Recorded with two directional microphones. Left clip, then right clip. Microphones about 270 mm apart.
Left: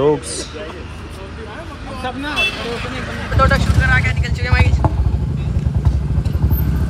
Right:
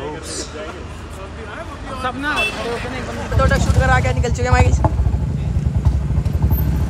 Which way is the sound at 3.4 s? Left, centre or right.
Centre.